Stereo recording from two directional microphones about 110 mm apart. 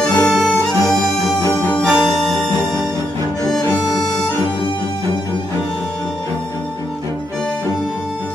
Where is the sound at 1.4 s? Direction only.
20° left (ahead or behind).